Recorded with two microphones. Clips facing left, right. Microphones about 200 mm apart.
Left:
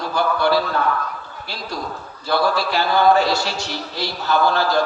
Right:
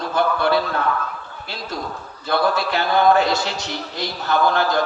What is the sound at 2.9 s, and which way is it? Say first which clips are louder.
A man's voice: even; 20° right (ahead or behind).